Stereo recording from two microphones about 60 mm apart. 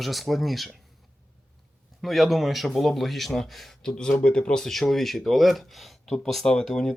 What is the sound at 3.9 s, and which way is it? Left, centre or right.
Speech, centre.